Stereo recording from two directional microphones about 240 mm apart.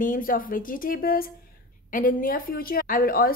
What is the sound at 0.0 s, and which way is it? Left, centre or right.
A woman's voice, left.